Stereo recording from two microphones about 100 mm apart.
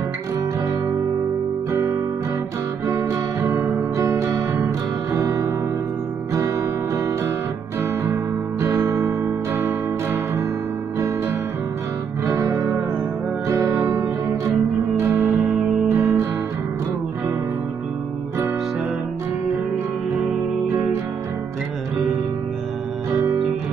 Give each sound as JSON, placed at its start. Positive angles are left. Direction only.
{"t": 2.9, "sound": "guitar", "side_deg": -30}
{"t": 5.2, "sound": "music", "side_deg": -30}
{"t": 7.8, "sound": "music", "side_deg": -25}
{"t": 12.4, "sound": "music", "side_deg": -40}
{"t": 13.7, "sound": "music", "side_deg": -25}
{"t": 15.0, "sound": "music", "side_deg": -20}
{"t": 15.9, "sound": "guitar", "side_deg": -30}